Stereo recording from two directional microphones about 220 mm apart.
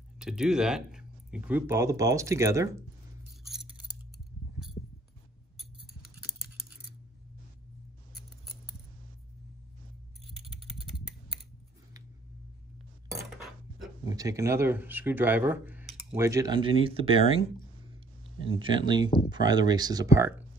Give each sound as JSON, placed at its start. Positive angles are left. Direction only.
{"t": 0.2, "sound": "speech", "side_deg": -5}
{"t": 6.0, "sound": "scissors", "side_deg": -5}
{"t": 14.0, "sound": "speech", "side_deg": -15}
{"t": 18.5, "sound": "speech", "side_deg": -20}